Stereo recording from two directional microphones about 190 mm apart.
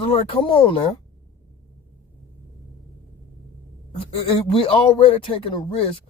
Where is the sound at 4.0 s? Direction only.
30° left (ahead or behind).